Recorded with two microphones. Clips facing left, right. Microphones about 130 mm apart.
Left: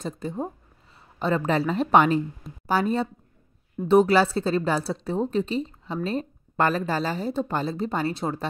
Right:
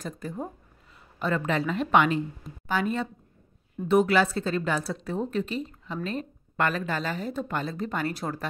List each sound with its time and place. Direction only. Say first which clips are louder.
0.0 s speech: left 4 dB; 25° left (ahead or behind)